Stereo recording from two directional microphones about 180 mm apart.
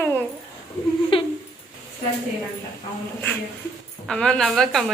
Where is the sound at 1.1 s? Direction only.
30° left (ahead or behind).